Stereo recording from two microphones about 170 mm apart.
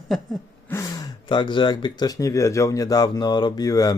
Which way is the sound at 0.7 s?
20° left (ahead or behind).